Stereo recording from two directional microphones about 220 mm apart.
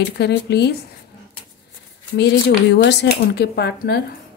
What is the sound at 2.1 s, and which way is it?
Speech, 50° left (ahead or behind).